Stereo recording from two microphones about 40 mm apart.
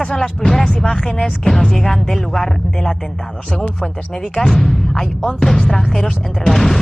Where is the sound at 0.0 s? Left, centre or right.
Centre.